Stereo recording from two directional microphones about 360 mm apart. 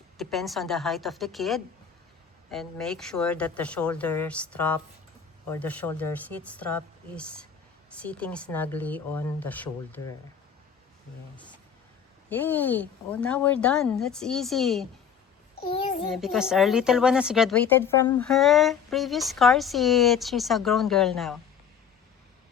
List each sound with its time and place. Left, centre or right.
0.2 s speech: centre
12.3 s speech: centre
15.7 s a child's voice: centre
16.0 s speech: centre